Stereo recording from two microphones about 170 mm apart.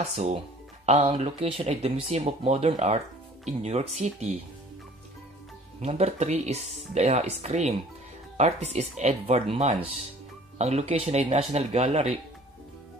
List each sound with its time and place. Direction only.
0.0 s speech: 40° right (ahead or behind)
5.8 s speech: 40° right (ahead or behind)